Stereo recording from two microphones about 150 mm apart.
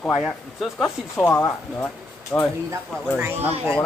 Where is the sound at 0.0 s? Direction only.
Centre (ahead or behind).